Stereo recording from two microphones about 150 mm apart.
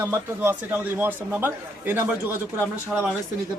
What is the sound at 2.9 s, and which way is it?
Speech, centre (ahead or behind).